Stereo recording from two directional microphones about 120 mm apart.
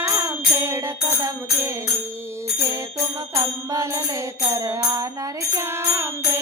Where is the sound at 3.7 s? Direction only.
20° right (ahead or behind).